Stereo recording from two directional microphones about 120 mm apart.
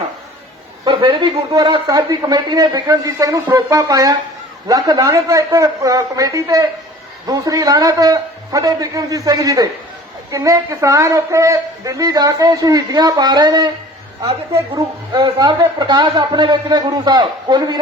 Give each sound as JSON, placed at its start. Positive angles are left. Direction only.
{"t": 0.9, "sound": "speech", "side_deg": -40}
{"t": 14.7, "sound": "speech", "side_deg": -35}